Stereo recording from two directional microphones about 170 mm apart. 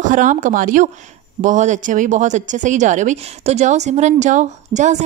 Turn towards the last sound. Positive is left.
turn(degrees=-45)  # may be behind; listen again after turning